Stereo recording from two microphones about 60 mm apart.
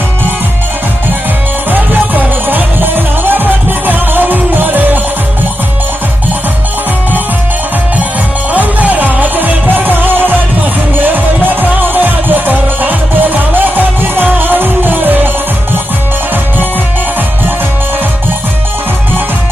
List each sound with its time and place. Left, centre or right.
1.7 s music: right
8.5 s music: right